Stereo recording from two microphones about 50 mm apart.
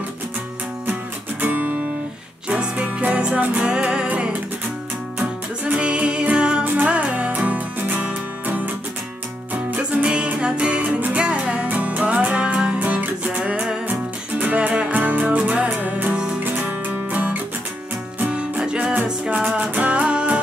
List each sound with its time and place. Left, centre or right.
1.4 s music: right
2.5 s music: right
3.6 s music: centre
5.7 s music: right
6.6 s music: right
9.7 s music: right
10.0 s music: right
14.4 s music: right
16.4 s music: right
18.8 s music: right
19.0 s music: centre
19.5 s music: right